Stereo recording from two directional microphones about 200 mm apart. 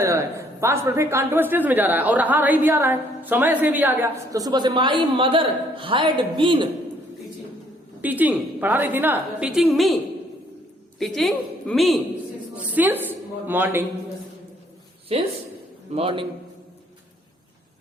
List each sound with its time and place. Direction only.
0.0 s a woman's voice: 15° right (ahead or behind)
8.0 s a woman's voice: 10° right (ahead or behind)
11.0 s a woman's voice: centre (ahead or behind)
12.7 s a woman's voice: 10° right (ahead or behind)
15.1 s a man's voice: 30° right (ahead or behind)